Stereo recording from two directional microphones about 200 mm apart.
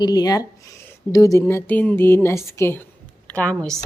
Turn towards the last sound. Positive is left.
turn(degrees=0)  # may be behind; listen again after turning